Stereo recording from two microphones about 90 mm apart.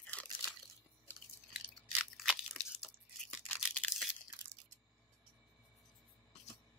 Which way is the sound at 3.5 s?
15° left (ahead or behind).